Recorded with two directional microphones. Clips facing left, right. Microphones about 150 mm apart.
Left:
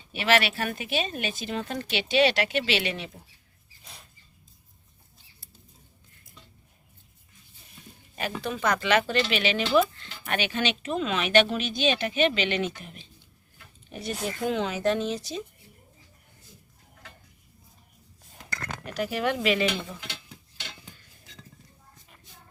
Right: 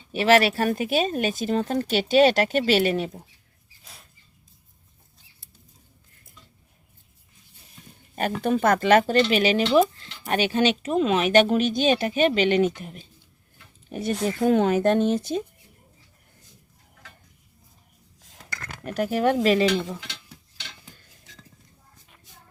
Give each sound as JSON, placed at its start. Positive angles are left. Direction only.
{"t": 0.1, "sound": "speech", "side_deg": -35}
{"t": 3.9, "sound": "a sound", "side_deg": 0}
{"t": 8.1, "sound": "speech", "side_deg": -50}
{"t": 18.9, "sound": "speech", "side_deg": -45}
{"t": 20.1, "sound": "stir", "side_deg": 10}